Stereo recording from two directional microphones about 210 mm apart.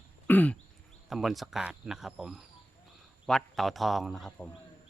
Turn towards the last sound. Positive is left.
turn(degrees=0)  # may be behind; listen again after turning